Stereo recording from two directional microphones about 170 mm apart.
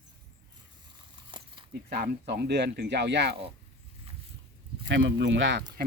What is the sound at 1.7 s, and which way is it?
Speech, 70° right (ahead or behind).